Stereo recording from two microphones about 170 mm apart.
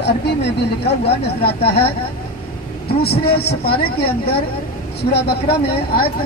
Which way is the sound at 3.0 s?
70° left (ahead or behind).